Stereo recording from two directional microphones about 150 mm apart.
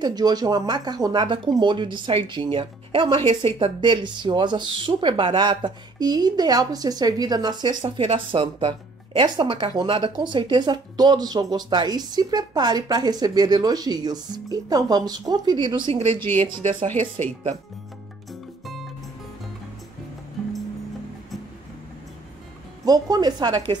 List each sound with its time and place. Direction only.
0.0 s speech: 25° right (ahead or behind)
22.8 s speech: 25° right (ahead or behind)